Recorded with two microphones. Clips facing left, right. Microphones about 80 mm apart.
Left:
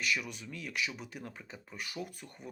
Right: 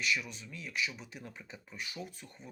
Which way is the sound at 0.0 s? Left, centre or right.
Left.